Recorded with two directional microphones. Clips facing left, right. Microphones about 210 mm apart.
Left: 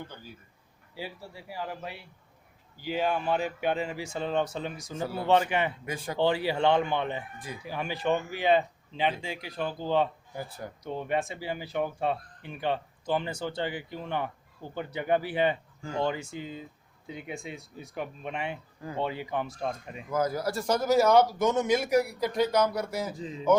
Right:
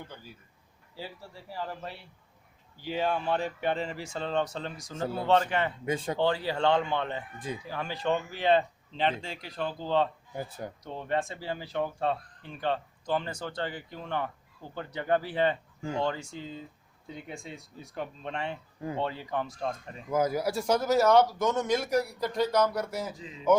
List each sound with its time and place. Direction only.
0.9 s speech: 10° left (ahead or behind)
5.0 s speech: 25° right (ahead or behind)
5.3 s speech: 10° left (ahead or behind)
5.8 s speech: 25° right (ahead or behind)
6.1 s speech: 10° left (ahead or behind)
7.3 s speech: 25° right (ahead or behind)
7.7 s speech: 15° left (ahead or behind)
10.3 s speech: 20° right (ahead or behind)
10.8 s speech: 10° left (ahead or behind)
15.8 s speech: 20° right (ahead or behind)
16.0 s speech: 10° left (ahead or behind)
18.8 s speech: 20° right (ahead or behind)
19.0 s speech: 10° left (ahead or behind)
20.1 s speech: 20° right (ahead or behind); by 23.1 s centre (ahead or behind)